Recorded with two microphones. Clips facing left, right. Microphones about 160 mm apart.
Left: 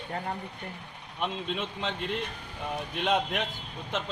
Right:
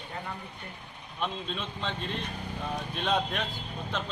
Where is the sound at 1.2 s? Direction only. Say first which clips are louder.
Left 2 dB; 15° left (ahead or behind).